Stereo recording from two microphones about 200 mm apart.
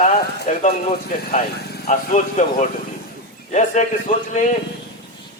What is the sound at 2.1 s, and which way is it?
A man's voice, 35° left (ahead or behind).